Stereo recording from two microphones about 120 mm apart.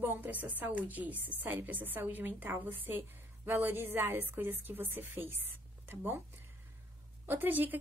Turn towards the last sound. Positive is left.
turn(degrees=-15)  # may be behind; listen again after turning